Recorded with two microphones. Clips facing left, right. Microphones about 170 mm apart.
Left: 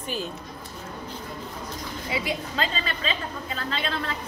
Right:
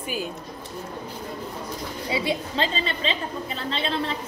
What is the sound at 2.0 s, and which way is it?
A woman's voice, 30° right (ahead or behind).